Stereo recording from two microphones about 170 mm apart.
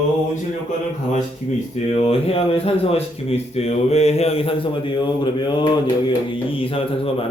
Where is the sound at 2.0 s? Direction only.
35° left (ahead or behind).